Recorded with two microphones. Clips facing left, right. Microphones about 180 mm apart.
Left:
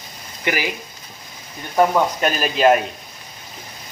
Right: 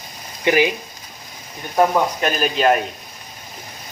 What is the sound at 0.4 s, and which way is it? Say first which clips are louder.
Speech: right 7 dB; 20° right (ahead or behind).